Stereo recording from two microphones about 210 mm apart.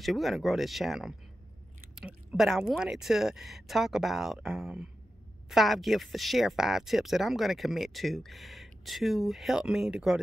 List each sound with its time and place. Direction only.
0.0 s speech: centre (ahead or behind)